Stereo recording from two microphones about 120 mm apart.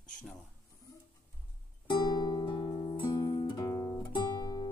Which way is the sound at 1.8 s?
35° left (ahead or behind).